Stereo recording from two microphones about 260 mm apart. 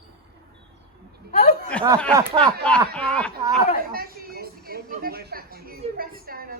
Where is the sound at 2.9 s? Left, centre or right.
Centre.